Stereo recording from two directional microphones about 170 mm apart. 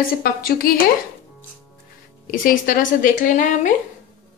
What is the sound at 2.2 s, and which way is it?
Speech, 55° left (ahead or behind).